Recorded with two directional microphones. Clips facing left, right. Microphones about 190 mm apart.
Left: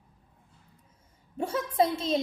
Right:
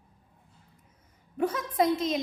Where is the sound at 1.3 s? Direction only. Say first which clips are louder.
Even; 30° left (ahead or behind).